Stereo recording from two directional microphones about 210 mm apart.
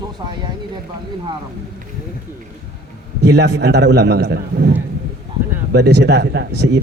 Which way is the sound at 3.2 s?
50° right (ahead or behind).